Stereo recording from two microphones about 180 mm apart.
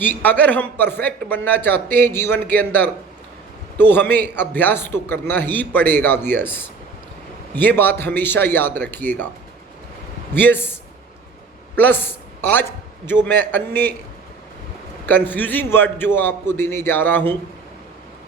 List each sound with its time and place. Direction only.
0.0 s a man's voice: 10° left (ahead or behind)
10.4 s a man's voice: 10° left (ahead or behind)
12.4 s a man's voice: 10° left (ahead or behind)
15.0 s a man's voice: 10° left (ahead or behind)